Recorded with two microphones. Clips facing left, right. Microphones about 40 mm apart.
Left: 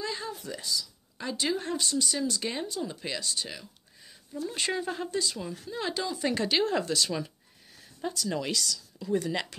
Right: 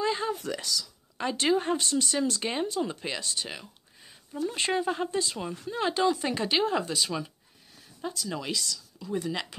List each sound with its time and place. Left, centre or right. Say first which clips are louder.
0.0 s a sound: right 6 dB; right
0.3 s speech: right 4 dB; right
1.1 s speech: right 5 dB; right
2.9 s speech: right 1 dB; right
4.8 s speech: right 4 dB; centre
5.1 s speech: right 1 dB; right; by 9.5 s centre